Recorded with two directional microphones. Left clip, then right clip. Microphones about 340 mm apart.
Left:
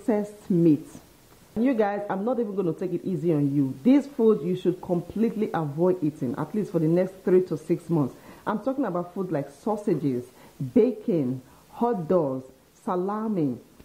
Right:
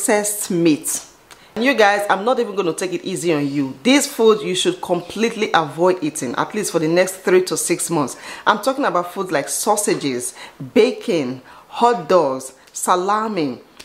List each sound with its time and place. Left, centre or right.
0.0 s speech: centre
4.8 s speech: right
5.1 s speech: centre